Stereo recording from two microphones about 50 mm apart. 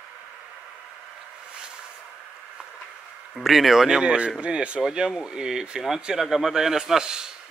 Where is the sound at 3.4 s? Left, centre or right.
Centre; by 4.8 s right.